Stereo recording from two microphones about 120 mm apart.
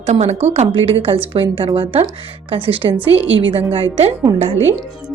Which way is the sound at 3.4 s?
45° right (ahead or behind).